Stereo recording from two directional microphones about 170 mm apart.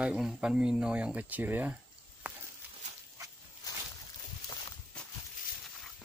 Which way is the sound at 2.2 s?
10° right (ahead or behind).